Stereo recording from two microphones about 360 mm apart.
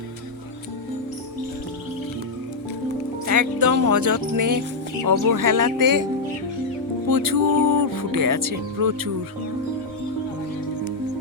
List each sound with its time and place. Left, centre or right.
3.2 s speech: right
7.1 s speech: right